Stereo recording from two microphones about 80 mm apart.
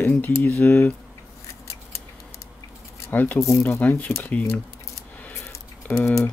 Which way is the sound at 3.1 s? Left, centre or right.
Left.